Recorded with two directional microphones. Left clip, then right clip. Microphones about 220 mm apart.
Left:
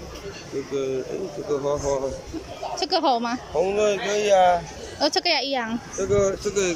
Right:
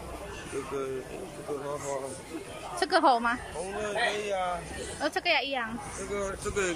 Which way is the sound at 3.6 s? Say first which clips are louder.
Left 11 dB; 40° left (ahead or behind).